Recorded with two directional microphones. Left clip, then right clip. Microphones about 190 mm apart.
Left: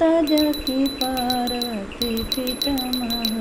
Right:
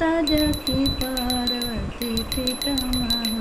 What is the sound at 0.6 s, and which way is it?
Music, 25° right (ahead or behind).